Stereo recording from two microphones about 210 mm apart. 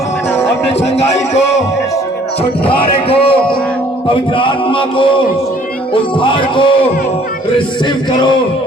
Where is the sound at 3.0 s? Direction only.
25° left (ahead or behind).